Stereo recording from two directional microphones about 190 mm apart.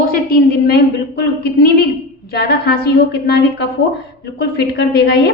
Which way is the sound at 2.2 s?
55° left (ahead or behind).